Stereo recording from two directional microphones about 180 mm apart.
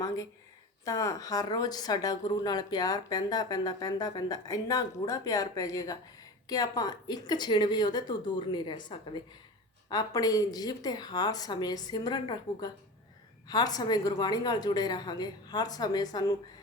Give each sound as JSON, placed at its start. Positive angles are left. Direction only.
{"t": 0.9, "sound": "speech", "side_deg": 20}